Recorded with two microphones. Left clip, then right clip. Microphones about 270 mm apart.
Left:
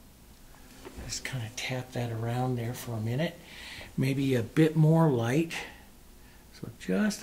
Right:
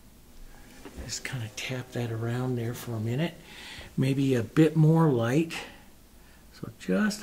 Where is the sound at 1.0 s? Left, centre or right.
Right.